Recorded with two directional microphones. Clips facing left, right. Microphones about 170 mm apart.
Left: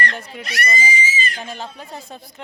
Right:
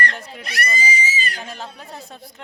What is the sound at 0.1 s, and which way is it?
Speech, centre (ahead or behind).